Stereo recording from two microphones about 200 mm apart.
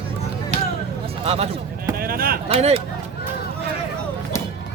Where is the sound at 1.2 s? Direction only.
30° right (ahead or behind).